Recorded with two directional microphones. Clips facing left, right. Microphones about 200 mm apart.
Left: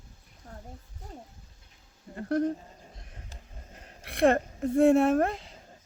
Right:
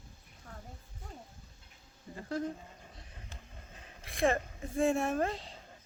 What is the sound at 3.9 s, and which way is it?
Speech, 65° left (ahead or behind).